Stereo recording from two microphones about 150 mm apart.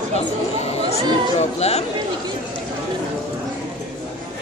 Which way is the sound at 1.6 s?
45° left (ahead or behind).